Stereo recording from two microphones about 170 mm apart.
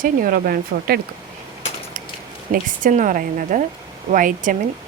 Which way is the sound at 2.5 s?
50° right (ahead or behind).